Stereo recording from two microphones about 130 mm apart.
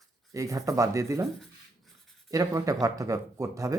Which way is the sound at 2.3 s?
25° right (ahead or behind).